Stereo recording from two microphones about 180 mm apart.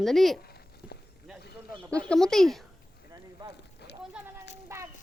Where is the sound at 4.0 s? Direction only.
10° right (ahead or behind).